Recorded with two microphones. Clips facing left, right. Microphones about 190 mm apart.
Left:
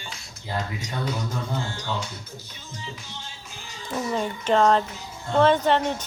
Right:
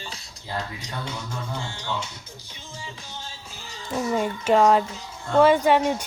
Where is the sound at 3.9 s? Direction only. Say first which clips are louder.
Right 2 dB; 10° right (ahead or behind).